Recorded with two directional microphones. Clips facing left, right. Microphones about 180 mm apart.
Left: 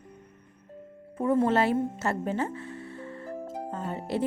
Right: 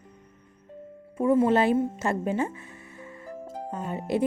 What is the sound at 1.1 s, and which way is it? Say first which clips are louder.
Speech: right 3 dB; 10° right (ahead or behind).